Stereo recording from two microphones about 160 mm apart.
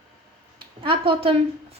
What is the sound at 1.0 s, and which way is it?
Speech, 35° right (ahead or behind).